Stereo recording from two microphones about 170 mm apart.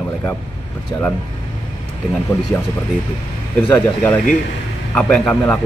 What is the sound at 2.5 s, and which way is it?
Speech, 20° left (ahead or behind).